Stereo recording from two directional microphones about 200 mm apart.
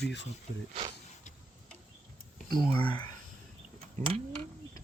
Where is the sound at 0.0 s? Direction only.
60° left (ahead or behind).